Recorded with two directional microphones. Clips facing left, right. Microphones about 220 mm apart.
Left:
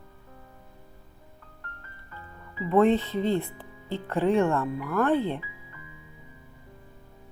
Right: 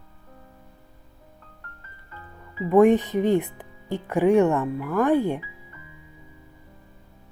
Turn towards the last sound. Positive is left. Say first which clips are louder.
# right 4 dB
turn(degrees=-15)  # may be behind; listen again after turning